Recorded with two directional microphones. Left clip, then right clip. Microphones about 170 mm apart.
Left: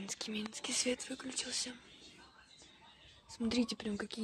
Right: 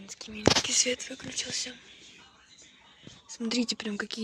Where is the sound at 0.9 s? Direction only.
25° left (ahead or behind).